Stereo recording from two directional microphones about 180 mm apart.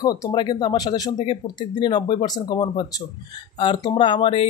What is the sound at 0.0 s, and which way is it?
Speech, 20° left (ahead or behind).